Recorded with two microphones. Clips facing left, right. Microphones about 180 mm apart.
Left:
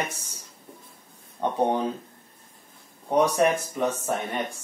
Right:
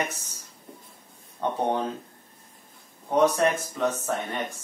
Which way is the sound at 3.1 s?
15° left (ahead or behind).